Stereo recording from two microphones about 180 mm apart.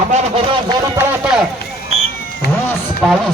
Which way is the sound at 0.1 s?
35° right (ahead or behind).